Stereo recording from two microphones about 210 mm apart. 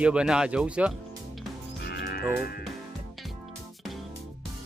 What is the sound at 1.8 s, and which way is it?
Music, 50° left (ahead or behind).